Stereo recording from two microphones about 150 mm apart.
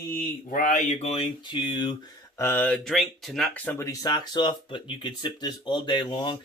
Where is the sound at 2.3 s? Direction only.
15° left (ahead or behind).